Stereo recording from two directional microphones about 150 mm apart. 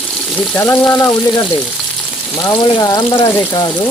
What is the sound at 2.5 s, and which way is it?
Frying, 35° left (ahead or behind).